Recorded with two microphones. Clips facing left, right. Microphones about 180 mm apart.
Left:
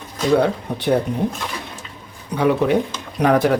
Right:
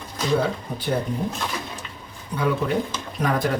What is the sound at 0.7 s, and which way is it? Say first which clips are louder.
Speech: left 5 dB; 70° left (ahead or behind).